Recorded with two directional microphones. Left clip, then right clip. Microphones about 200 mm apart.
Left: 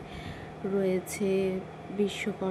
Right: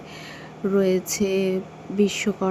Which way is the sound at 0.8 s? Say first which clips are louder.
Right 8 dB; 30° right (ahead or behind).